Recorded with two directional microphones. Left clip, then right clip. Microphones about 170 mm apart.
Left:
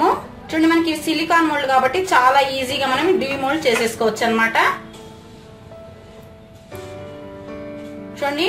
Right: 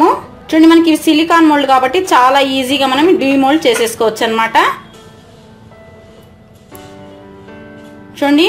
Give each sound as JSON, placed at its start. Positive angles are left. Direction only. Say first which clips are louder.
{"t": 0.0, "sound": "a woman's voice", "louder": "right 7 dB", "side_deg": -40}
{"t": 8.1, "sound": "a woman's voice", "louder": "right 10 dB", "side_deg": -45}